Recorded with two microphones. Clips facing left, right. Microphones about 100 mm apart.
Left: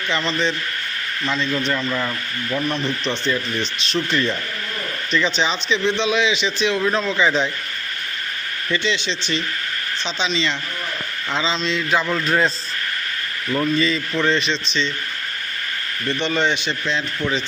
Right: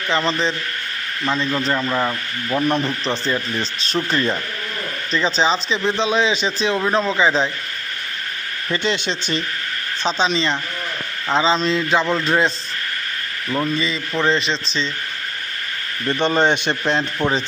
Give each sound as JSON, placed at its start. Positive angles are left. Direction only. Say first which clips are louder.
{"t": 0.1, "sound": "speech", "louder": "right 2 dB", "side_deg": -35}
{"t": 1.5, "sound": "speech", "louder": "right 2 dB", "side_deg": -35}
{"t": 8.7, "sound": "a man's voice", "louder": "right 1 dB", "side_deg": -45}
{"t": 11.8, "sound": "speech", "louder": "right 2 dB", "side_deg": -25}
{"t": 13.7, "sound": "speech", "louder": "left 2 dB", "side_deg": -25}
{"t": 16.0, "sound": "a man's voice", "louder": "right 4 dB", "side_deg": -45}